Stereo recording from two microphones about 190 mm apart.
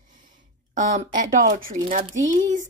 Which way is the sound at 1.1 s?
45° right (ahead or behind).